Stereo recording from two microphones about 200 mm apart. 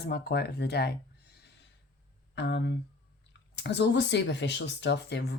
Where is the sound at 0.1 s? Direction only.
55° left (ahead or behind).